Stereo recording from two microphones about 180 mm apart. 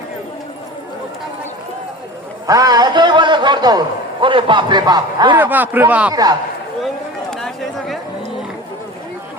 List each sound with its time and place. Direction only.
2.5 s a man's voice: 20° right (ahead or behind)
5.4 s a man's voice: 10° right (ahead or behind)
6.8 s a sound: centre (ahead or behind)